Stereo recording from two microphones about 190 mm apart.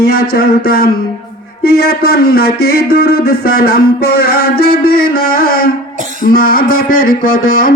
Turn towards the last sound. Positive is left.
turn(degrees=45)  # may be behind; listen again after turning